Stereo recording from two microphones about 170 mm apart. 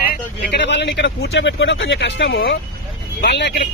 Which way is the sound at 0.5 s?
90° left.